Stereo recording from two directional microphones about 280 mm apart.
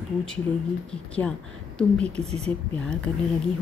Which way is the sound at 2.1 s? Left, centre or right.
Right.